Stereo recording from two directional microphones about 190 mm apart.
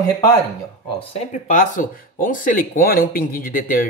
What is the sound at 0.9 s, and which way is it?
Speech, 35° left (ahead or behind).